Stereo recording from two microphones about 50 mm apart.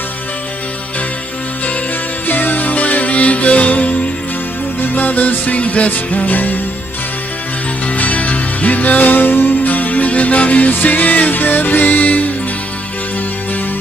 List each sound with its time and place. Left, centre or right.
2.2 s music: left
7.9 s music: left